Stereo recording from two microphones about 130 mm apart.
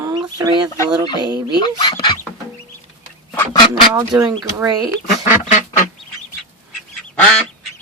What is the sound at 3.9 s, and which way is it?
Speech, 20° right (ahead or behind).